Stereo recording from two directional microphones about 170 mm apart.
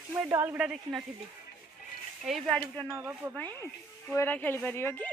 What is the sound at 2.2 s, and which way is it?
Speech, centre (ahead or behind).